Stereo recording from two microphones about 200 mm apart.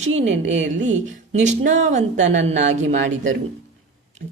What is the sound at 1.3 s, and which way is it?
A woman's voice, 35° right (ahead or behind).